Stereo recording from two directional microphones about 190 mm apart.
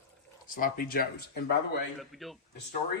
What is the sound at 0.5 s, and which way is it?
Speech, 50° left (ahead or behind).